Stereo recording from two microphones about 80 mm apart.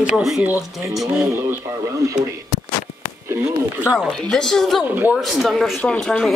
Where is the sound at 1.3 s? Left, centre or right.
Right.